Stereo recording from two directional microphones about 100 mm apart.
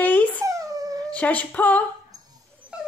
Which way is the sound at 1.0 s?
15° left (ahead or behind).